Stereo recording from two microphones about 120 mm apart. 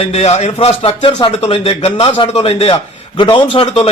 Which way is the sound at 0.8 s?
50° left (ahead or behind).